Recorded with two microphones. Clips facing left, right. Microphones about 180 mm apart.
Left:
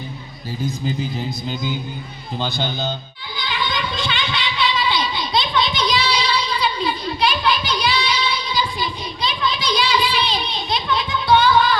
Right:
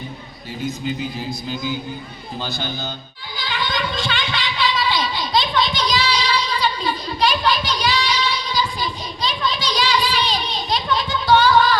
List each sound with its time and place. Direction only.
2.4 s speech: 20° left (ahead or behind)
3.3 s a sound: 45° right (ahead or behind)
9.9 s music: 40° right (ahead or behind)